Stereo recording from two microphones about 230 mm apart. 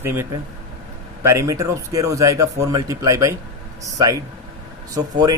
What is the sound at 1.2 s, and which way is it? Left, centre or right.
Speech, centre.